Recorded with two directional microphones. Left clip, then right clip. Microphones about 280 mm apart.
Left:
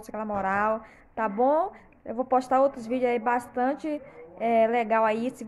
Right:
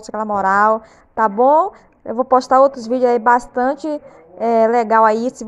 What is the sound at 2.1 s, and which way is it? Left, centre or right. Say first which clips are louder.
Speech: right 11 dB; centre.